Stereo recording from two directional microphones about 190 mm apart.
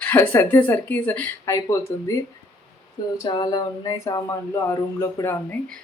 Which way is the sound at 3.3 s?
25° left (ahead or behind).